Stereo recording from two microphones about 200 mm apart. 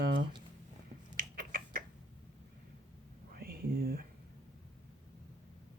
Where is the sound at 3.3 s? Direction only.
50° right (ahead or behind).